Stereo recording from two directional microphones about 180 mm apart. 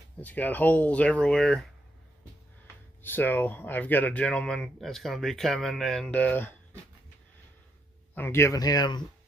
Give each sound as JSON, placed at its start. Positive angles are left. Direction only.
{"t": 0.2, "sound": "speech", "side_deg": 10}
{"t": 3.0, "sound": "speech", "side_deg": 10}
{"t": 8.1, "sound": "speech", "side_deg": 15}